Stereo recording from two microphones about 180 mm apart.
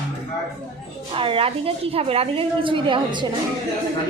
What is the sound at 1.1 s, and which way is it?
A woman's voice, 30° right (ahead or behind).